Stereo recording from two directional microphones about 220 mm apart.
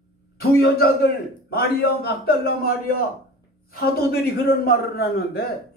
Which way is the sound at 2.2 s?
45° left (ahead or behind).